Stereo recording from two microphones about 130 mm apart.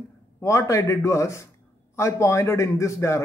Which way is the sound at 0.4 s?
20° left (ahead or behind).